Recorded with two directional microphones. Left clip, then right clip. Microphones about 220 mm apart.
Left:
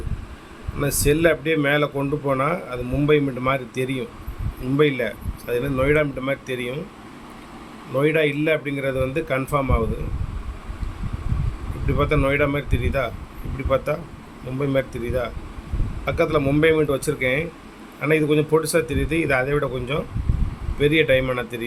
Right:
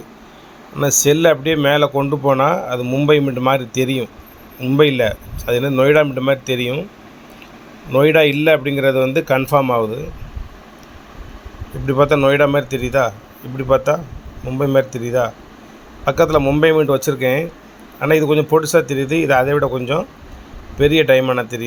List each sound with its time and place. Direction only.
0.8 s speech: 15° right (ahead or behind)
7.9 s speech: 25° right (ahead or behind)
11.9 s speech: 20° right (ahead or behind)